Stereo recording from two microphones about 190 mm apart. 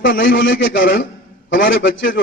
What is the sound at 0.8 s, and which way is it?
Speech, 50° left (ahead or behind).